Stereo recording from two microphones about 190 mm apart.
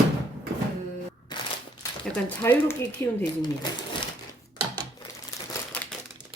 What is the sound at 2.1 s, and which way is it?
Speech, 10° left (ahead or behind).